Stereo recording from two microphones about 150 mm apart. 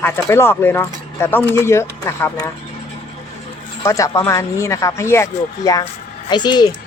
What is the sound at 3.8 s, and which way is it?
Speech, 20° left (ahead or behind).